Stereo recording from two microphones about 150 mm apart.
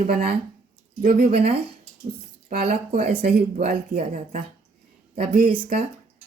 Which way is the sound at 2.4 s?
60° right (ahead or behind).